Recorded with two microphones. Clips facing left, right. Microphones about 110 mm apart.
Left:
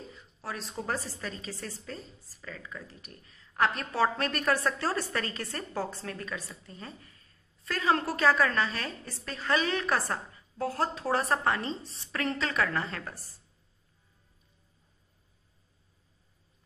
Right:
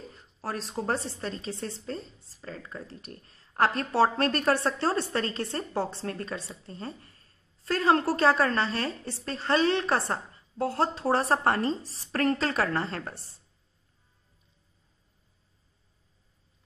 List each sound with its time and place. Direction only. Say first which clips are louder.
0.1 s a woman's voice: right 6 dB; 35° right (ahead or behind)